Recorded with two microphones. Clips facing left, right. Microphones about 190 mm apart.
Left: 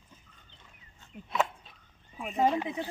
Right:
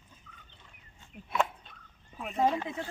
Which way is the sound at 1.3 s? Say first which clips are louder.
Even; centre (ahead or behind).